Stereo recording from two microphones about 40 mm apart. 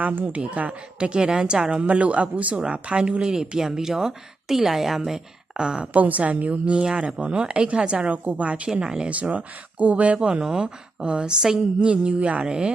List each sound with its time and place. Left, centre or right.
0.0 s speech: right
0.3 s a woman's voice: right
1.9 s speech: right
5.9 s a woman's voice: right
9.0 s speech: right
10.2 s a woman's voice: right